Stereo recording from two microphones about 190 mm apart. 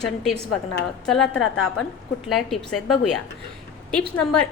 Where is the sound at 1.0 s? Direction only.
5° left (ahead or behind).